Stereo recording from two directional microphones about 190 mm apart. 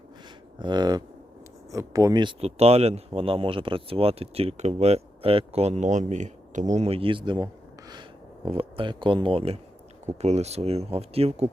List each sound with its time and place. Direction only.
0.6 s speech: 20° right (ahead or behind)